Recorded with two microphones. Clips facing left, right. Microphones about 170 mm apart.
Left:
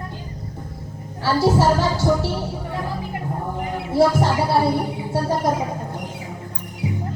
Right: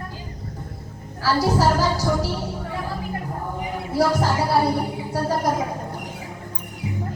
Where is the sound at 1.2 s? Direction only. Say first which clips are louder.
Left 2 dB; 25° left (ahead or behind).